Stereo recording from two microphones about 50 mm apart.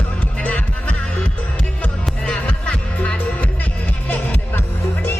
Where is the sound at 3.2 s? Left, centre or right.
Left.